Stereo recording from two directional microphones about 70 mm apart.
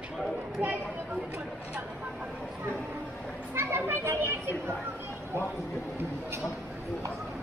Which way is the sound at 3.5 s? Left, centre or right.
Right.